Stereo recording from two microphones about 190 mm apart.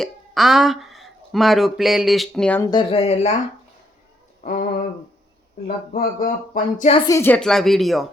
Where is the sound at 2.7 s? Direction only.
30° left (ahead or behind).